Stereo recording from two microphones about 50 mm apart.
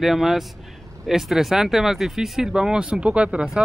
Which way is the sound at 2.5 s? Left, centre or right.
Centre.